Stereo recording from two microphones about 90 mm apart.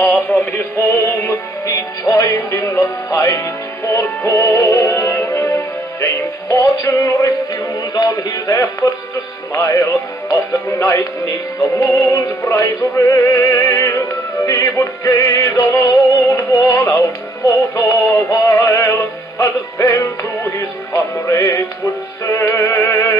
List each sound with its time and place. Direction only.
0.3 s synthetic singing: centre (ahead or behind)
0.7 s music: 40° left (ahead or behind)